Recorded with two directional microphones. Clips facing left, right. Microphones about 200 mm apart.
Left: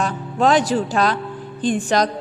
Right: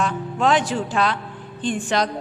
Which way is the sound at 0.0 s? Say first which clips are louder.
Left 2 dB; 40° left (ahead or behind).